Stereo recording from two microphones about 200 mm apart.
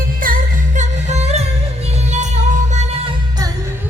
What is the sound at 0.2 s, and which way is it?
Music, 45° right (ahead or behind).